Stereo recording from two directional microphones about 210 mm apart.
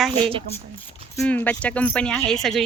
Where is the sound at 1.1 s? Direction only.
10° left (ahead or behind).